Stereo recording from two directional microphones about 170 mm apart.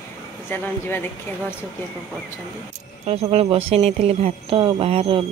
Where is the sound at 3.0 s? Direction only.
35° right (ahead or behind).